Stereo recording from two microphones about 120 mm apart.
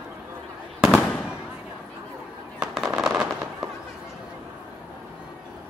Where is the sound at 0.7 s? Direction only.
Centre (ahead or behind).